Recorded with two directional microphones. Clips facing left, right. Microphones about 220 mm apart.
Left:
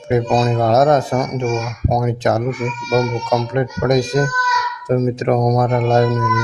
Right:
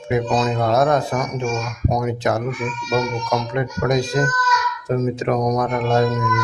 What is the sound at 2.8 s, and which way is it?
Speech, 45° left (ahead or behind).